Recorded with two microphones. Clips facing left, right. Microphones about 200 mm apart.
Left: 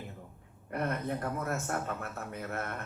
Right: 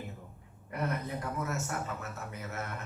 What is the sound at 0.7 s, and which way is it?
Speech, 55° left (ahead or behind).